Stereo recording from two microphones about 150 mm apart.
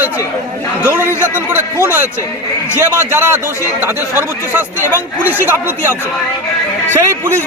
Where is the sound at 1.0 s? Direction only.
15° left (ahead or behind).